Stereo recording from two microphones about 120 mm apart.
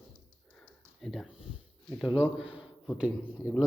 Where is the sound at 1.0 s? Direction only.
Centre (ahead or behind).